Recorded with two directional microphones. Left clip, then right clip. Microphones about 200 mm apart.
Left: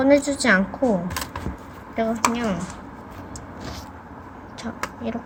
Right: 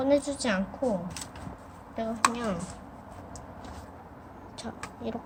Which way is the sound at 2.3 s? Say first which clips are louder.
Left 7 dB; 10° right (ahead or behind).